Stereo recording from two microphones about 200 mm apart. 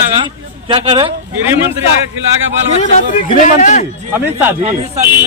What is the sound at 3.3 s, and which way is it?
Speech, 35° left (ahead or behind).